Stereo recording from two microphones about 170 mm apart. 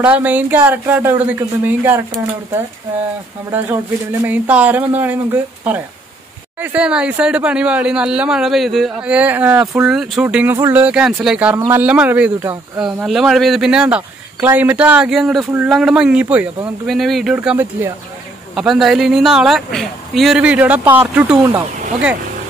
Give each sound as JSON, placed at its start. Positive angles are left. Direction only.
{"t": 0.0, "sound": "speech", "side_deg": -10}
{"t": 4.3, "sound": "speech", "side_deg": -10}
{"t": 21.4, "sound": "speech", "side_deg": -20}